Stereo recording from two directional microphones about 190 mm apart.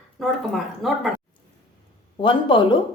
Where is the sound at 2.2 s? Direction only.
25° left (ahead or behind).